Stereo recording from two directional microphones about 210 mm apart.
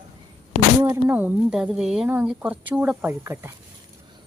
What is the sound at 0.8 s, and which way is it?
A woman's voice, 10° right (ahead or behind).